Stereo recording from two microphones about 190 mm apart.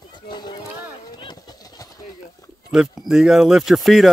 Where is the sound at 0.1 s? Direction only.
25° left (ahead or behind).